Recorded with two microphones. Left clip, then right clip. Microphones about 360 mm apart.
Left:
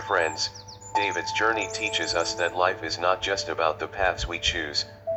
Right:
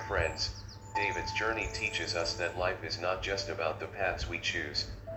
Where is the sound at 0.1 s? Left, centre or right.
Left.